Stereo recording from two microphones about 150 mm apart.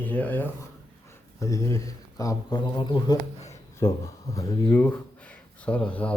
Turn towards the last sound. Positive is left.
turn(degrees=10)  # may be behind; listen again after turning